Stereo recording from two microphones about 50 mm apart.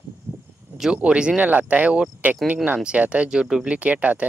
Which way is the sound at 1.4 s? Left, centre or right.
Right.